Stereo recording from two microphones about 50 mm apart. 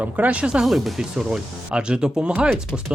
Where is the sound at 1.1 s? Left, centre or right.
Centre.